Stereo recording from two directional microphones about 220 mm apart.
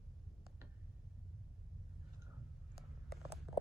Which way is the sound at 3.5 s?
10° right (ahead or behind).